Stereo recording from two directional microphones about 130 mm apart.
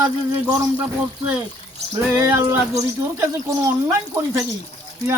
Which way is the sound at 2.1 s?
20° right (ahead or behind).